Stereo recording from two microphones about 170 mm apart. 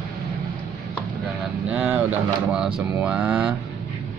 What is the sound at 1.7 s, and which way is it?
Speech, 10° right (ahead or behind).